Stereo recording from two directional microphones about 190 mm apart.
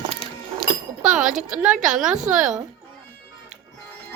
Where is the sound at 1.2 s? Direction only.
40° right (ahead or behind).